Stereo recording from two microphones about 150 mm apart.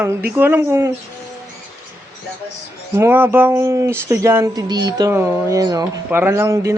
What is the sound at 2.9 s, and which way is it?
Speech, 15° right (ahead or behind).